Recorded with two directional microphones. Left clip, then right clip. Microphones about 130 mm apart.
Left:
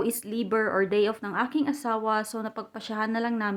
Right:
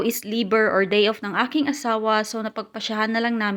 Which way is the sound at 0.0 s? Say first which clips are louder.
Right 5 dB; 20° right (ahead or behind).